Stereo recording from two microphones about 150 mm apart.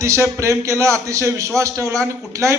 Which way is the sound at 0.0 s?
20° right (ahead or behind).